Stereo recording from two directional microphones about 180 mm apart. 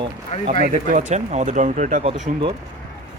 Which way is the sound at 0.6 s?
50° right (ahead or behind).